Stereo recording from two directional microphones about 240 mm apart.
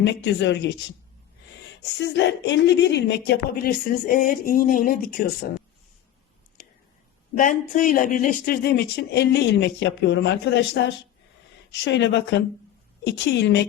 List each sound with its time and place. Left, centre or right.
0.0 s speech: left
2.0 s speech: left
7.3 s speech: left